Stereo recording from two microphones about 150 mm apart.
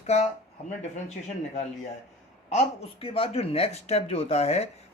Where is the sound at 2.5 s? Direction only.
40° left (ahead or behind).